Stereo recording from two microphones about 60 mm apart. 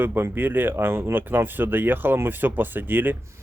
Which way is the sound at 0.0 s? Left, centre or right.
Right.